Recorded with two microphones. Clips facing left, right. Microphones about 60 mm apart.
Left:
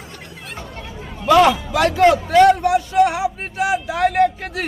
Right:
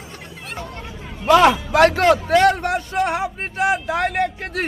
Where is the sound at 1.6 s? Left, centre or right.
Right.